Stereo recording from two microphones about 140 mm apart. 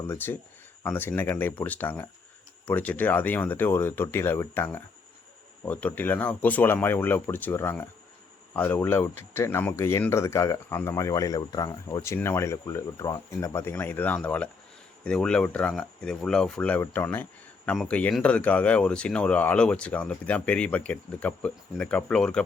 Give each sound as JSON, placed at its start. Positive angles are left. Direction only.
{"t": 0.1, "sound": "speech", "side_deg": 15}